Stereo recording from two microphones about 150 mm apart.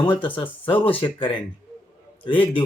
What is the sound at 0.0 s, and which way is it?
Speech, 35° left (ahead or behind).